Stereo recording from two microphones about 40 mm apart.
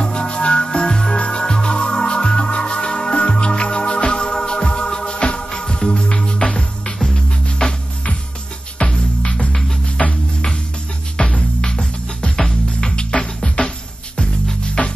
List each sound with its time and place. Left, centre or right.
0.0 s music: left
11.2 s music: left
13.1 s music: left